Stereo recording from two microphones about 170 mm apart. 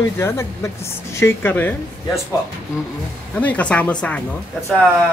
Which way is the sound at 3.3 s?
10° left (ahead or behind).